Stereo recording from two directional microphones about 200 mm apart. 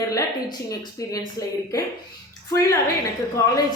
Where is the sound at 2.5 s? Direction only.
15° left (ahead or behind).